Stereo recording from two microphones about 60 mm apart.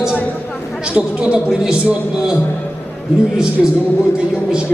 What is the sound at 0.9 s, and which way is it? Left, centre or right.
Speech, centre.